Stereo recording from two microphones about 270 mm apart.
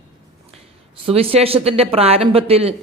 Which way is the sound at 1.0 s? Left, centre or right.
Right.